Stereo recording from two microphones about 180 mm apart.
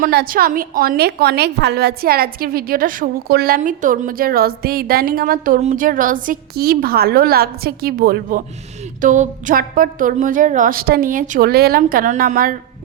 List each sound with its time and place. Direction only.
0.0 s a woman's voice: 55° right (ahead or behind)